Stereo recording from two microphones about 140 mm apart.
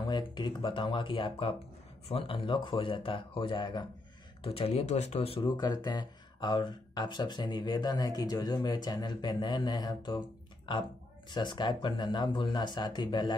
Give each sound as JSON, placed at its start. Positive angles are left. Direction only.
{"t": 0.0, "sound": "speech", "side_deg": 30}
{"t": 5.4, "sound": "speech", "side_deg": 30}